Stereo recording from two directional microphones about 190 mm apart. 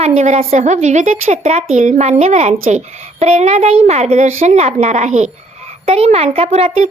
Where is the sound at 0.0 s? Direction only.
35° right (ahead or behind).